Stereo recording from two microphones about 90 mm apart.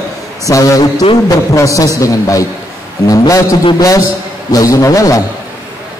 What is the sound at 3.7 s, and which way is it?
A man's voice, 40° left (ahead or behind).